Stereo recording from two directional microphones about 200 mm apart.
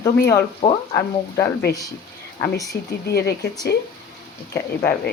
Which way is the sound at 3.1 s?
55° left (ahead or behind).